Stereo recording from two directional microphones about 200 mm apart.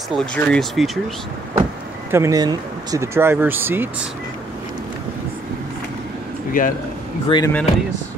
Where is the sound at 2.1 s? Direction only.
15° right (ahead or behind).